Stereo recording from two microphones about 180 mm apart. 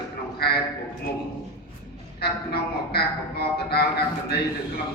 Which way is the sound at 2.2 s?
60° left (ahead or behind).